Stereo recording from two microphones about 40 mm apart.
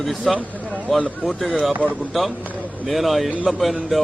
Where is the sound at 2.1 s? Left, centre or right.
Centre.